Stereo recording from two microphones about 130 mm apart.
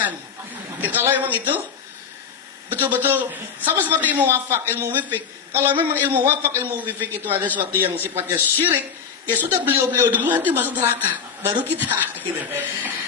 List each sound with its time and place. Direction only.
0.7 s a woman's voice: 15° right (ahead or behind)
2.7 s a woman's voice: 15° right (ahead or behind)